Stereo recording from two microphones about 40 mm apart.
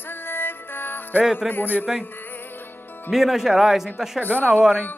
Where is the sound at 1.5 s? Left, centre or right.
Left.